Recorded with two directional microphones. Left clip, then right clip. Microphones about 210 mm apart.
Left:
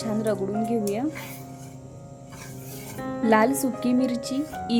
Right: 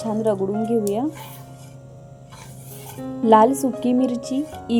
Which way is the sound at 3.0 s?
5° right (ahead or behind).